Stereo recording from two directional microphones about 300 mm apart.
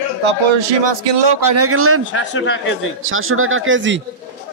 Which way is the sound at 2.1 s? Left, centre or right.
Left.